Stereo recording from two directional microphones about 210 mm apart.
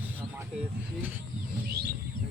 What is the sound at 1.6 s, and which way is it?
Bird, 50° right (ahead or behind).